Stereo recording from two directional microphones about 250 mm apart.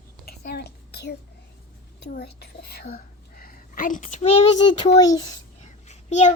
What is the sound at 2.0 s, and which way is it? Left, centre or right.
Whispering, left.